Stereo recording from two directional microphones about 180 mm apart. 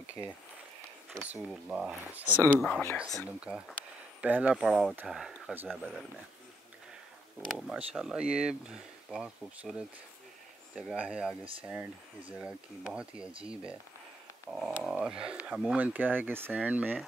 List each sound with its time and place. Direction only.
1.5 s speech: 5° right (ahead or behind)
2.4 s speech: 10° left (ahead or behind)
3.2 s speech: 5° right (ahead or behind)
7.4 s speech: 5° right (ahead or behind)